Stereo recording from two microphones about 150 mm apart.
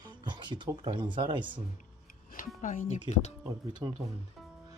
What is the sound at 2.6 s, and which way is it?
Speech, 60° left (ahead or behind).